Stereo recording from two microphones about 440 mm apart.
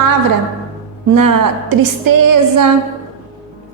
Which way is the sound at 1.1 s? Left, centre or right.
Right.